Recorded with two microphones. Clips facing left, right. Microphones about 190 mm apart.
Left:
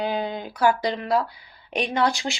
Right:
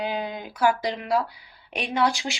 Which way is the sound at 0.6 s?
10° right (ahead or behind).